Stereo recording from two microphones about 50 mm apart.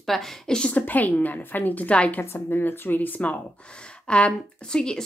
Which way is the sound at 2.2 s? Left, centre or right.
Left.